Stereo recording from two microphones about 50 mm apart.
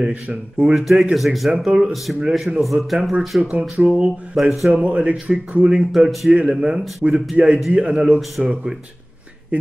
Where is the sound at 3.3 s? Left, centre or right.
Centre.